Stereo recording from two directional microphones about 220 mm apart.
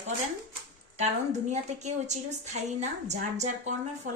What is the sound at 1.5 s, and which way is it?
A woman's voice, 30° right (ahead or behind).